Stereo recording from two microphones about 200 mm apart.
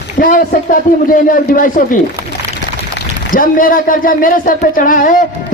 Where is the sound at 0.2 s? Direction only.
45° left (ahead or behind).